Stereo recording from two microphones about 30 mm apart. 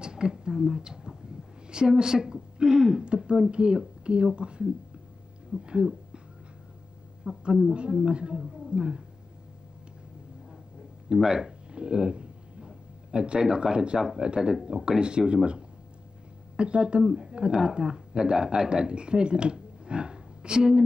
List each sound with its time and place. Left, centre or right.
0.0 s a woman's voice: right
7.3 s speech: right
11.1 s speech: right
11.7 s a sound: right
14.1 s speech: right